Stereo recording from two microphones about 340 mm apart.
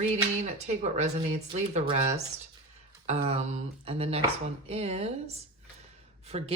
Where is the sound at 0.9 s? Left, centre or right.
Centre.